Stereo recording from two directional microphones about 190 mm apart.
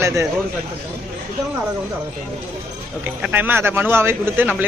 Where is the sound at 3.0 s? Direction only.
10° right (ahead or behind).